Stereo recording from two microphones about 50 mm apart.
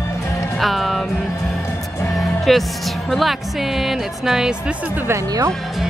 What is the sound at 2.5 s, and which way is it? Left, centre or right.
Speech, centre.